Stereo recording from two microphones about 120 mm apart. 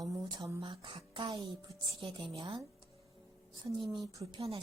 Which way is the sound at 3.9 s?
35° right (ahead or behind).